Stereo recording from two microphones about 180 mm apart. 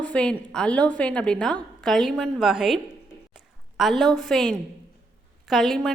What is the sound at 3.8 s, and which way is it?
A woman's voice, centre (ahead or behind).